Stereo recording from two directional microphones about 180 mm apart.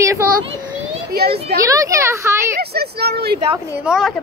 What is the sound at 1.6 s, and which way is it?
Speech, 20° right (ahead or behind).